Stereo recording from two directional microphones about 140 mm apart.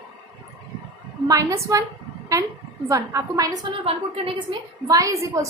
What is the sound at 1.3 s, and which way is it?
A woman's voice, 25° right (ahead or behind).